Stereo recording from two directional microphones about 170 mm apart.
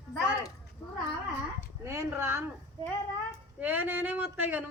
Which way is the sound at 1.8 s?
15° right (ahead or behind).